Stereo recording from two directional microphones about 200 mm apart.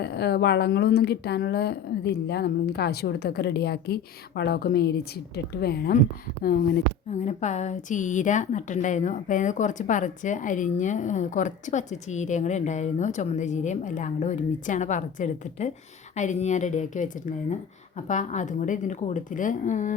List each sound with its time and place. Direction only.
0.0 s speech: 55° left (ahead or behind)
7.1 s a woman's voice: 35° left (ahead or behind)
18.1 s a woman's voice: 35° left (ahead or behind)